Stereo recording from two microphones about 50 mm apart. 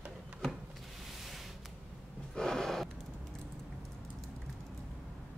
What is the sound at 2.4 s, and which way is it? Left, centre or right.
Gasp, centre.